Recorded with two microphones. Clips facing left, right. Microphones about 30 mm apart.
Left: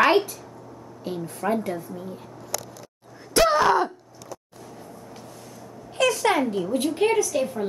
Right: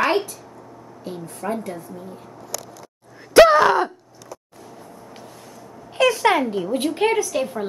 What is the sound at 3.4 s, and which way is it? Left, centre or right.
Gasp, centre.